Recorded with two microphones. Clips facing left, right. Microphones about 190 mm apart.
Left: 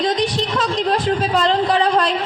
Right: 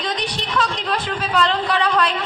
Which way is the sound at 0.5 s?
25° left (ahead or behind).